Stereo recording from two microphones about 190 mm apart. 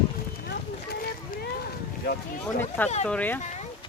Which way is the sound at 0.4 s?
55° left (ahead or behind).